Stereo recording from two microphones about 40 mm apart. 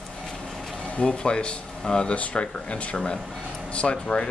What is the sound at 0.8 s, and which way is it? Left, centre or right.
Speech, left.